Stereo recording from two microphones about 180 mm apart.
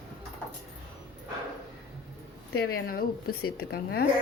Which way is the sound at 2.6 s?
55° left (ahead or behind).